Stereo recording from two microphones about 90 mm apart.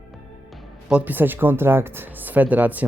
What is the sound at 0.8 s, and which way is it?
Speech, 15° right (ahead or behind).